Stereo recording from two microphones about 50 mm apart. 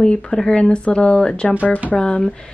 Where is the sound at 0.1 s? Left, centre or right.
Centre.